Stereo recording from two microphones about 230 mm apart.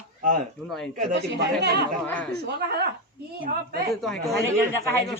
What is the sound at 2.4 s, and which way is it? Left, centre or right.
Speech, right.